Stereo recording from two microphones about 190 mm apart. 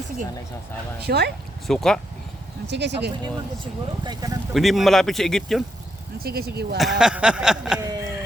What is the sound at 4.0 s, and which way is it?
Speech, 20° right (ahead or behind).